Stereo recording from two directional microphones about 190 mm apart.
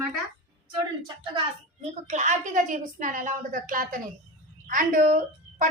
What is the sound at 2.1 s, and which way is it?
A woman's voice, 40° right (ahead or behind).